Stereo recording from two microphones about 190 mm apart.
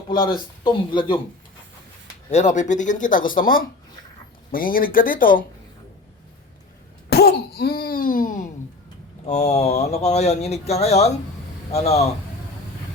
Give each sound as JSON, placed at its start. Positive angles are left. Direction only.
{"t": 0.1, "sound": "speech", "side_deg": 25}
{"t": 2.3, "sound": "speech", "side_deg": 40}
{"t": 7.1, "sound": "cough", "side_deg": 55}
{"t": 9.2, "sound": "speech", "side_deg": 35}